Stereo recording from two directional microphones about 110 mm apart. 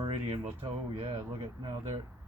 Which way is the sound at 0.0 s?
50° right (ahead or behind).